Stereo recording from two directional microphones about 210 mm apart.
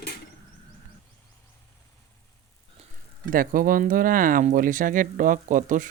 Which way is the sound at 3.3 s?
40° right (ahead or behind).